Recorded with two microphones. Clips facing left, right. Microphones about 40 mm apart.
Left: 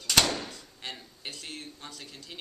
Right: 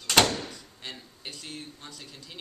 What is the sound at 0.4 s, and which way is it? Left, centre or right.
A man's voice, centre.